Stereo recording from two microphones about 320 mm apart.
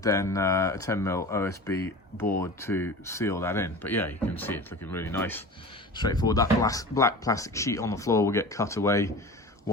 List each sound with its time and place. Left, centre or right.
0.0 s speech: centre